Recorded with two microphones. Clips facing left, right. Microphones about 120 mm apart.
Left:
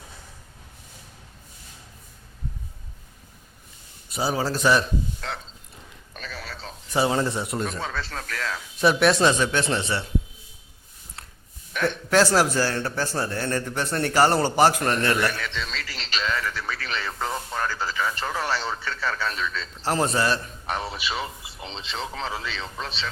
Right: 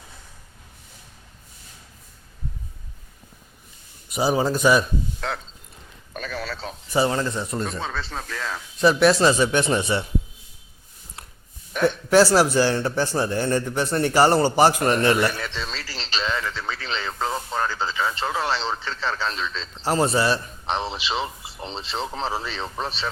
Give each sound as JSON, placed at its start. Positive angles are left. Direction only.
{"t": 4.1, "sound": "a man's voice", "side_deg": -20}
{"t": 4.5, "sound": "a man's voice", "side_deg": -10}
{"t": 6.1, "sound": "a sound", "side_deg": -50}
{"t": 6.4, "sound": "a sound", "side_deg": -90}
{"t": 7.1, "sound": "speech", "side_deg": 15}
{"t": 8.3, "sound": "a man's voice", "side_deg": -15}
{"t": 8.8, "sound": "a man's voice", "side_deg": 0}
{"t": 11.8, "sound": "a man's voice", "side_deg": -10}
{"t": 15.3, "sound": "radio", "side_deg": -35}
{"t": 19.8, "sound": "a man's voice", "side_deg": -5}
{"t": 20.7, "sound": "speech", "side_deg": -25}